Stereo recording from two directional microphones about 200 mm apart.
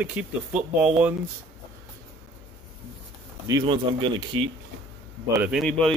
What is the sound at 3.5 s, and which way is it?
Speech, 20° right (ahead or behind).